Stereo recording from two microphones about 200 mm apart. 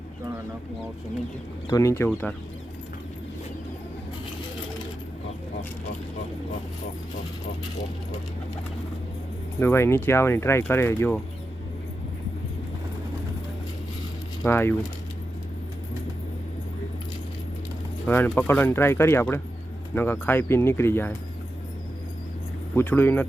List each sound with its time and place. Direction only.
1.6 s speech: 15° left (ahead or behind)
9.6 s speech: 10° left (ahead or behind)
14.4 s speech: 10° left (ahead or behind)
18.0 s speech: 10° left (ahead or behind)
22.7 s speech: 10° left (ahead or behind)